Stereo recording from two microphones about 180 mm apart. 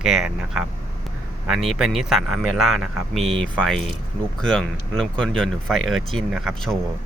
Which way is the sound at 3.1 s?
35° right (ahead or behind).